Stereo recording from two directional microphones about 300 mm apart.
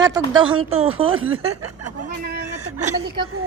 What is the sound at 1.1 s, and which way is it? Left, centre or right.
Speech, right.